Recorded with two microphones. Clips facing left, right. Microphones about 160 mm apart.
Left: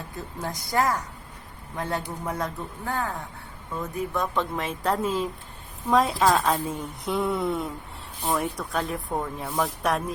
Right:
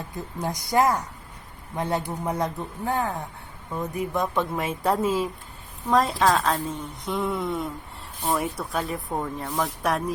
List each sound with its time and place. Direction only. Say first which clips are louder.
0.3 s a man's voice: right 3 dB; 15° right (ahead or behind); by 10.0 s centre (ahead or behind)